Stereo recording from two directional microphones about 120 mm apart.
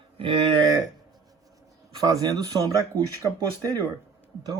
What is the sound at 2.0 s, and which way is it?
Speech, 30° right (ahead or behind).